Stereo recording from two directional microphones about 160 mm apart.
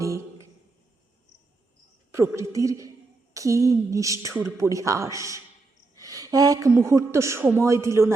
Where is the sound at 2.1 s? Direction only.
15° right (ahead or behind).